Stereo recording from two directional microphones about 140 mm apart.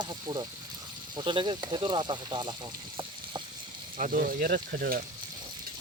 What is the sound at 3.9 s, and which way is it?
Speech, 75° right (ahead or behind).